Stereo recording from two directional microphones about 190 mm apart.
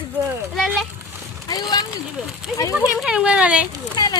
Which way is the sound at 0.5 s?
Centre (ahead or behind).